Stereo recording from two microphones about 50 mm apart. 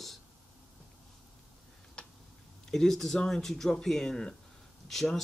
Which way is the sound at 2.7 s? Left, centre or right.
Centre.